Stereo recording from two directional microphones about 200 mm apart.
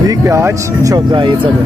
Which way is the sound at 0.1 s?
15° right (ahead or behind).